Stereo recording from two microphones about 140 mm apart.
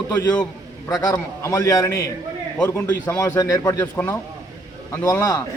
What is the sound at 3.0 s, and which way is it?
Speech, 25° left (ahead or behind).